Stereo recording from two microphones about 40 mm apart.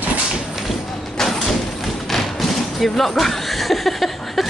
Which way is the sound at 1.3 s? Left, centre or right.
Centre.